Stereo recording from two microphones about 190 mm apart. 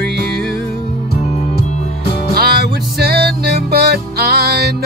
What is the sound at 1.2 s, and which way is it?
Music, 35° left (ahead or behind).